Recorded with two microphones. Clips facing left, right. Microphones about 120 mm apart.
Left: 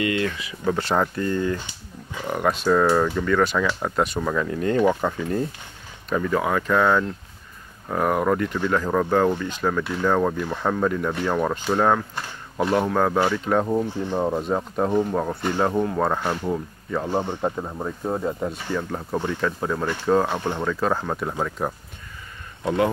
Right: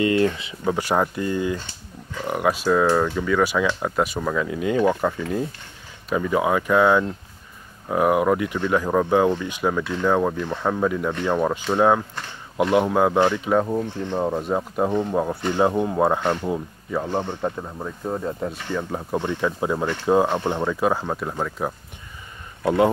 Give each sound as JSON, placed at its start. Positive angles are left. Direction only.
{"t": 0.0, "sound": "speech", "side_deg": -30}
{"t": 0.7, "sound": "speech", "side_deg": -10}
{"t": 14.9, "sound": "speech", "side_deg": 5}
{"t": 15.5, "sound": "speech", "side_deg": -10}
{"t": 16.2, "sound": "speech", "side_deg": 5}
{"t": 16.4, "sound": "speech", "side_deg": -10}
{"t": 17.0, "sound": "speech", "side_deg": 10}
{"t": 18.4, "sound": "speech", "side_deg": 5}
{"t": 18.8, "sound": "speech", "side_deg": -10}
{"t": 22.6, "sound": "speech", "side_deg": -20}